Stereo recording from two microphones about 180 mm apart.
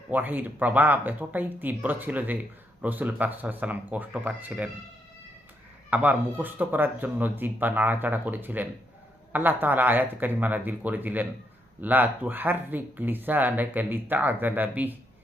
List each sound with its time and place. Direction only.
0.1 s speech: 10° right (ahead or behind)
5.9 s speech: 10° right (ahead or behind)